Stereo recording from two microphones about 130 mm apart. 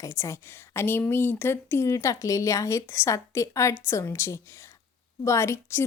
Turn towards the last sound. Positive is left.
turn(degrees=20)  # may be behind; listen again after turning